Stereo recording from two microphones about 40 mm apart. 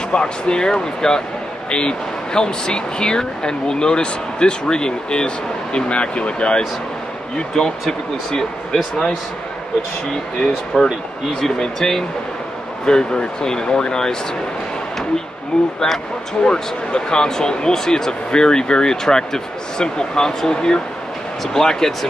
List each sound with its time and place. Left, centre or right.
0.1 s speech: left
7.5 s speech: centre
10.4 s speech: centre
16.4 s speech: centre